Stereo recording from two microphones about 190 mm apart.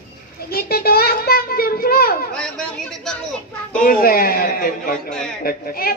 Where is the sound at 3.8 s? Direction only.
50° left (ahead or behind).